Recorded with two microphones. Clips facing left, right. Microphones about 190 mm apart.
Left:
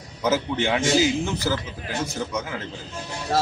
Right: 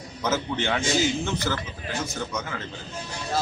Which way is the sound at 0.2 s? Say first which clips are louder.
Left 4 dB; 10° left (ahead or behind).